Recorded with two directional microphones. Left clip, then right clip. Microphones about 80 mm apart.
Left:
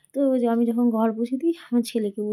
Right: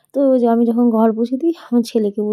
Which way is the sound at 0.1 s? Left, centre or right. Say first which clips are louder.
Right 8 dB; right.